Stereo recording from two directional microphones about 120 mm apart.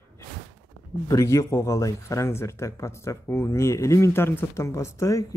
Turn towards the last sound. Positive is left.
turn(degrees=25)  # may be behind; listen again after turning